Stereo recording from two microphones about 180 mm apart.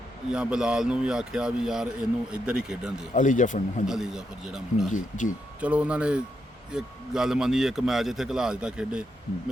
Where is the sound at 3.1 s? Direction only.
45° left (ahead or behind).